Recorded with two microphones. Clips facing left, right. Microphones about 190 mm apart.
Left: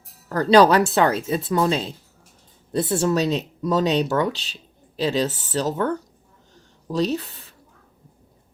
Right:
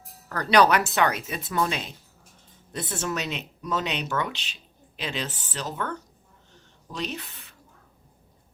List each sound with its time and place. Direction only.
0.3 s speech: 25° left (ahead or behind)